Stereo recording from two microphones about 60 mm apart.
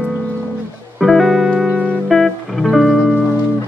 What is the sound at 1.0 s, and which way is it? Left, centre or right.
Music, centre.